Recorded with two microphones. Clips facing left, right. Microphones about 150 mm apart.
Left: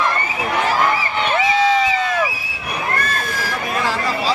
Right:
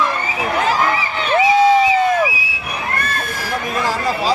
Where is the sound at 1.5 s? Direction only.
45° right (ahead or behind).